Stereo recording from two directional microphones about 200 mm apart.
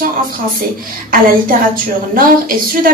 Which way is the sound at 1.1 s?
45° right (ahead or behind).